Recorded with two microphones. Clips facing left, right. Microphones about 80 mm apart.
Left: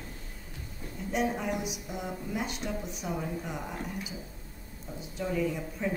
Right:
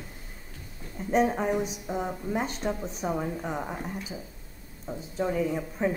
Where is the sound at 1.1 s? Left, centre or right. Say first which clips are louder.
Right 6 dB; right.